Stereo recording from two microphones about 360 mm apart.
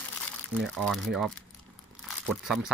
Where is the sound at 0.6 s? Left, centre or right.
Centre.